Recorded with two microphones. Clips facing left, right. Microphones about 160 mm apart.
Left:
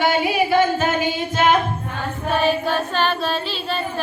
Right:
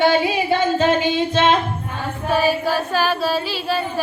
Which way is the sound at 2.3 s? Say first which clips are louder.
Right 1 dB; 5° right (ahead or behind).